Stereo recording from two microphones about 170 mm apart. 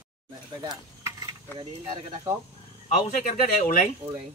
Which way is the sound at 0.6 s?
25° right (ahead or behind).